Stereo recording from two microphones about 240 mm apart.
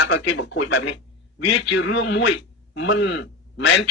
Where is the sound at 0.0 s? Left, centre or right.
Left.